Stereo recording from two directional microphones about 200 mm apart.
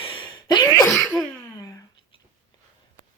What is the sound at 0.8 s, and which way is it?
Sneeze, centre (ahead or behind).